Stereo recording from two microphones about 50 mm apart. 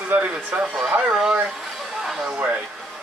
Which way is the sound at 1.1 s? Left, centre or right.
Centre.